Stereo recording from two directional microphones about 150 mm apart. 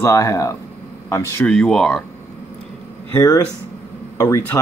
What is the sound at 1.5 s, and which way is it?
Speech, 5° left (ahead or behind).